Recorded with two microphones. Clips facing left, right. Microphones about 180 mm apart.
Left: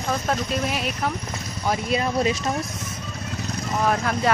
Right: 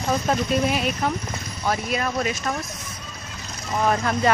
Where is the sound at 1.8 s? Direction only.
25° left (ahead or behind).